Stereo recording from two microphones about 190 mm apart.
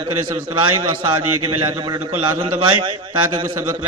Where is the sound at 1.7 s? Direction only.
25° right (ahead or behind).